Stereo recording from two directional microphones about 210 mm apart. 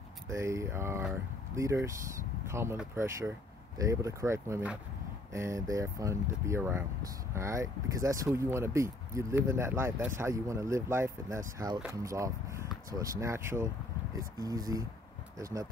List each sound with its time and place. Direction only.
0.3 s speech: 15° right (ahead or behind)